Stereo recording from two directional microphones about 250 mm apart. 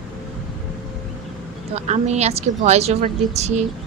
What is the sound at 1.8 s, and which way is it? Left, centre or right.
Speech, right.